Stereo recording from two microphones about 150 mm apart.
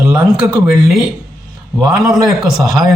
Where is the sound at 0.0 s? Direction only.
5° right (ahead or behind).